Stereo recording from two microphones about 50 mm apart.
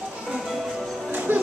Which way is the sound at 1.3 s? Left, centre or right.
Right.